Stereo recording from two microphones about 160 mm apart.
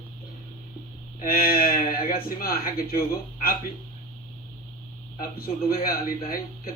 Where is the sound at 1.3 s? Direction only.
70° left (ahead or behind).